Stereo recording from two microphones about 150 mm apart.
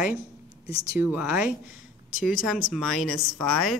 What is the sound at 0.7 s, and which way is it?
Speech, 25° right (ahead or behind).